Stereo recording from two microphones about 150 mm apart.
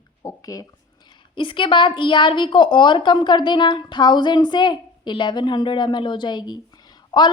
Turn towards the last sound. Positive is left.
turn(degrees=30)  # may be behind; listen again after turning